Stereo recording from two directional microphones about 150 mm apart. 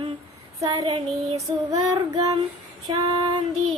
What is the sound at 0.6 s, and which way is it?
Child singing, 25° right (ahead or behind).